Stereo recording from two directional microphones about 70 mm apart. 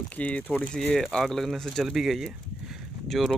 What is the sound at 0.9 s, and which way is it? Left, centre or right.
Speech, centre.